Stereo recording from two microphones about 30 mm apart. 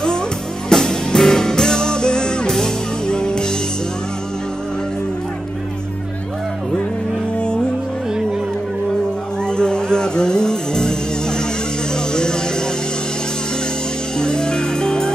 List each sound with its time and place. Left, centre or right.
0.7 s music: left
7.3 s music: left
9.4 s music: left
14.1 s music: left